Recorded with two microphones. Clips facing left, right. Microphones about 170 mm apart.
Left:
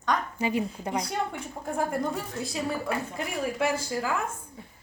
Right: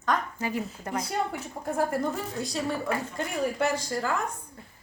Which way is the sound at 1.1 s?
5° right (ahead or behind).